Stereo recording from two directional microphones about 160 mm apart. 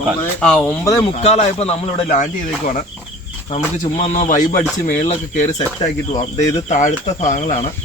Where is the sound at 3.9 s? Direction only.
45° left (ahead or behind).